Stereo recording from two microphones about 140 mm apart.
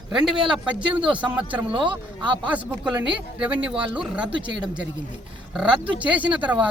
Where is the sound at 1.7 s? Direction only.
35° right (ahead or behind).